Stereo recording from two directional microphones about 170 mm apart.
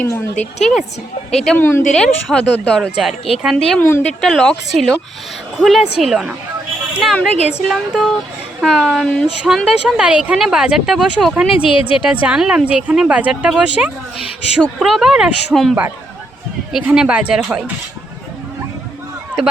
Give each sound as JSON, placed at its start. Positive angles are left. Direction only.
{"t": 0.0, "sound": "a woman's voice", "side_deg": 10}
{"t": 1.5, "sound": "a woman's voice", "side_deg": 15}
{"t": 3.8, "sound": "a woman's voice", "side_deg": 15}
{"t": 7.7, "sound": "a woman's voice", "side_deg": 0}
{"t": 11.5, "sound": "a woman's voice", "side_deg": 30}
{"t": 12.2, "sound": "a woman's voice", "side_deg": -5}